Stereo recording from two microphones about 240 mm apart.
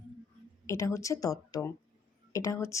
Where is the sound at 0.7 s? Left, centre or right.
Centre.